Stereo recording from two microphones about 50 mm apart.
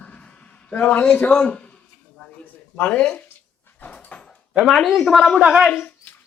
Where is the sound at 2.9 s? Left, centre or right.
Left.